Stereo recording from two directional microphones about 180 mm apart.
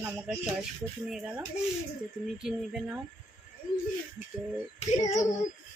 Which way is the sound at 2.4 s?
5° right (ahead or behind).